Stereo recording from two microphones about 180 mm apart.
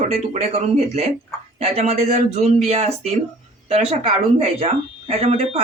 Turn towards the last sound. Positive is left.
turn(degrees=-35)  # may be behind; listen again after turning